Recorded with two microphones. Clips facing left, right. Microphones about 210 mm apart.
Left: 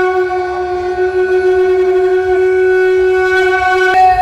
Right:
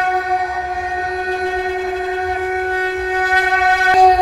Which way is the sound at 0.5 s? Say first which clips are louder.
Left 10 dB; 90° left.